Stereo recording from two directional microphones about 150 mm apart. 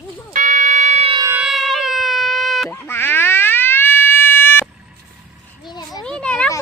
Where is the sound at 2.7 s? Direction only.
15° left (ahead or behind).